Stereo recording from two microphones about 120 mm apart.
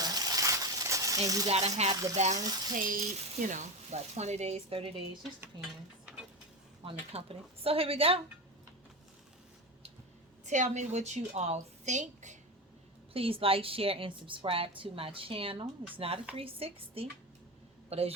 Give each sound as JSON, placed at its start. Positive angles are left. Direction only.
{"t": 0.0, "sound": "a sound", "side_deg": -35}
{"t": 1.5, "sound": "speech", "side_deg": -60}
{"t": 1.9, "sound": "speech", "side_deg": -30}
{"t": 2.1, "sound": "frying", "side_deg": -70}
{"t": 2.4, "sound": "frying", "side_deg": -30}
{"t": 3.4, "sound": "speech", "side_deg": -90}
{"t": 6.8, "sound": "a woman's voice", "side_deg": -50}
{"t": 10.4, "sound": "a woman's voice", "side_deg": -85}
{"t": 13.1, "sound": "a woman's voice", "side_deg": -50}